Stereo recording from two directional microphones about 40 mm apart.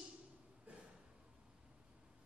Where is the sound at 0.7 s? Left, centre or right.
Right.